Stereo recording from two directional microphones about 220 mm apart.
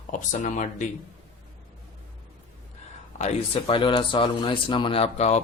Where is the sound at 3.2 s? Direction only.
30° left (ahead or behind).